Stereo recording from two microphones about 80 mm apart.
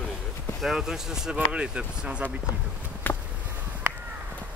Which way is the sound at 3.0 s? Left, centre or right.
Left.